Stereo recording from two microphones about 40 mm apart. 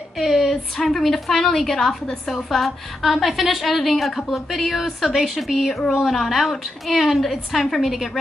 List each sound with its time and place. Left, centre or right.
0.2 s a woman's voice: centre